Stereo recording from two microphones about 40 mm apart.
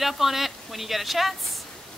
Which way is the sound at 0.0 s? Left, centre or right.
Centre.